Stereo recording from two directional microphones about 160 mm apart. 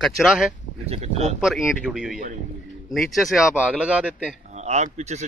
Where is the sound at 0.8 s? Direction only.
40° right (ahead or behind).